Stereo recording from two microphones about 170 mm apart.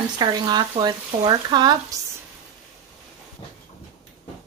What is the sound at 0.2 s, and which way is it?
Speech, 25° right (ahead or behind).